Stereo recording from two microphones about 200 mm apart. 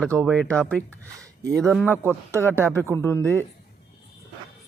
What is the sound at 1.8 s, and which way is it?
Speech, 10° right (ahead or behind).